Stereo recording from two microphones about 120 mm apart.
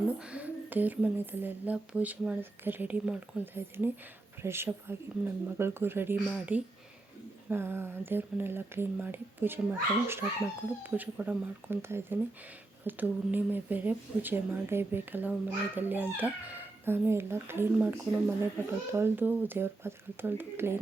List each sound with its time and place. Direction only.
0.2 s speech: 10° right (ahead or behind)